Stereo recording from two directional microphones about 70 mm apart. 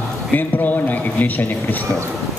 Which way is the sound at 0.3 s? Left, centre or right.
Left.